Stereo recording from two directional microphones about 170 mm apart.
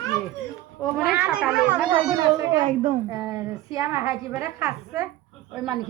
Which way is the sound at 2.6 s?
50° right (ahead or behind).